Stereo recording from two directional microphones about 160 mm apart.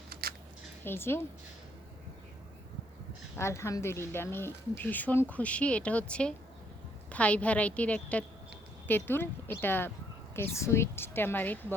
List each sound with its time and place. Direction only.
0.1 s a sound: 70° right (ahead or behind)
0.9 s speech: 15° left (ahead or behind)
3.3 s speech: 15° left (ahead or behind)